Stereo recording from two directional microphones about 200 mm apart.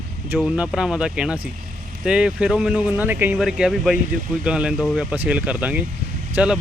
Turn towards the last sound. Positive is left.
turn(degrees=-5)  # may be behind; listen again after turning